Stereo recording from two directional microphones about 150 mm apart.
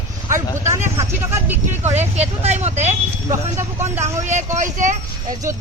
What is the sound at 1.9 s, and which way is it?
Speech, 45° right (ahead or behind).